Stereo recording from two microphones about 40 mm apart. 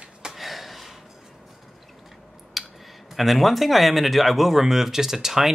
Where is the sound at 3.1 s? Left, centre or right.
Centre.